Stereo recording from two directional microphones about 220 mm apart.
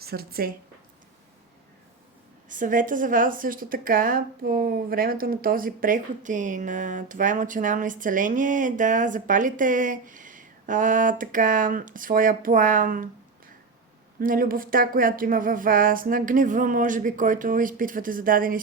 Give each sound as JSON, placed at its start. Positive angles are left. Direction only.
{"t": 0.0, "sound": "a woman's voice", "side_deg": -45}
{"t": 2.5, "sound": "a woman's voice", "side_deg": -35}
{"t": 14.2, "sound": "a woman's voice", "side_deg": -40}